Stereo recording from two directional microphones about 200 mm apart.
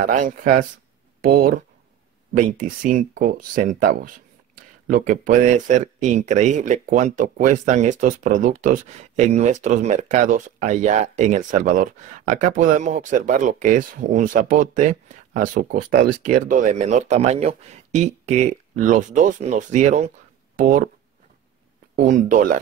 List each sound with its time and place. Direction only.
0.0 s speech: 40° right (ahead or behind)
21.9 s speech: 40° right (ahead or behind)